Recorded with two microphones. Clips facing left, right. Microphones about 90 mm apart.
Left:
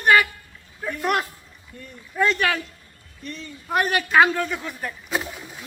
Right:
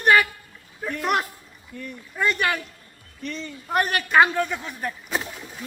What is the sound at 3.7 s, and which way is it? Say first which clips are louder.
Speech: left 1 dB; centre (ahead or behind).